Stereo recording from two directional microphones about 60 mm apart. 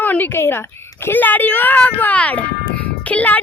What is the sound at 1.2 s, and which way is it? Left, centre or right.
Speech, left.